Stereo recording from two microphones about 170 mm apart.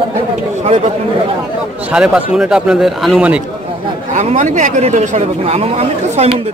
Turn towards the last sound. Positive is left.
turn(degrees=-40)  # may be behind; listen again after turning